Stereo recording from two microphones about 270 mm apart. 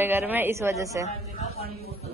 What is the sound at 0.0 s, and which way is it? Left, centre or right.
A man's voice, centre.